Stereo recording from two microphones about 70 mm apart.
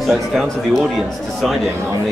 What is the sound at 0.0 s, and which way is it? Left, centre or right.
Speech, centre.